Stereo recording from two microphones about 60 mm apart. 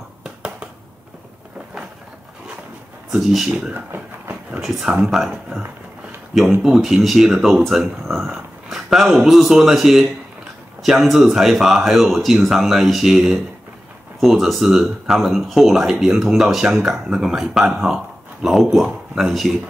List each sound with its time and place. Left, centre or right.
0.2 s a sound: centre
3.2 s speech: centre
3.4 s speech: centre
3.7 s a sound: right
4.8 s speech: centre
6.6 s speech: centre